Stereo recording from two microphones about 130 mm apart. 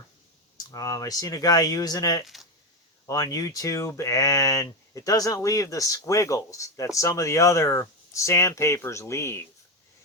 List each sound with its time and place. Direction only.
0.5 s speech: 25° left (ahead or behind)
2.2 s speech: centre (ahead or behind)
3.3 s speech: 25° left (ahead or behind)